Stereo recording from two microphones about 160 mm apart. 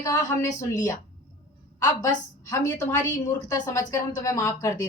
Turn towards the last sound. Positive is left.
turn(degrees=20)  # may be behind; listen again after turning